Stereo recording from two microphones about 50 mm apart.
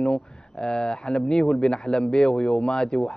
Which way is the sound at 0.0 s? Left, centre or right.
Centre.